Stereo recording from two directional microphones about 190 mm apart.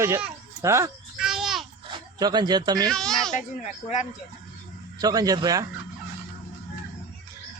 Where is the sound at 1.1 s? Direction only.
Centre (ahead or behind).